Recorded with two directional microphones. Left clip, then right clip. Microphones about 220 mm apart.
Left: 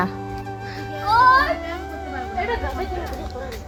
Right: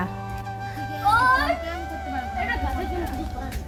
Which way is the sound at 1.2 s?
Centre (ahead or behind).